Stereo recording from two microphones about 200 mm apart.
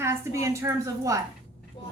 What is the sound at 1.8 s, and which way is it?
Vehicle, 25° left (ahead or behind).